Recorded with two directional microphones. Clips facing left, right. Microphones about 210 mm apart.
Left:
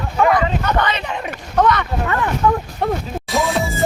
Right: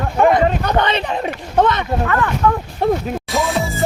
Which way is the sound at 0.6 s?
30° right (ahead or behind).